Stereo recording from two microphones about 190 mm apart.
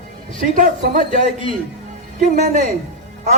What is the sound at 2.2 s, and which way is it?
Speech, 40° right (ahead or behind).